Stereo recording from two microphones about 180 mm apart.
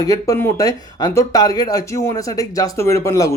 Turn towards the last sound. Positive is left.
turn(degrees=15)  # may be behind; listen again after turning